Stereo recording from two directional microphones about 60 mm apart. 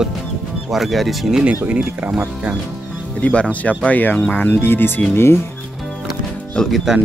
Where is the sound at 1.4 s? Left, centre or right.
Right.